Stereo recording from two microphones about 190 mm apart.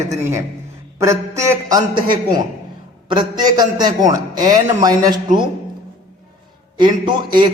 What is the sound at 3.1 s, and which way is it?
A man's voice, 25° right (ahead or behind).